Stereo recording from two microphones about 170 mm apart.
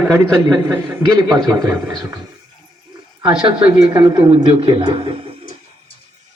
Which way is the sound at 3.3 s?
30° right (ahead or behind).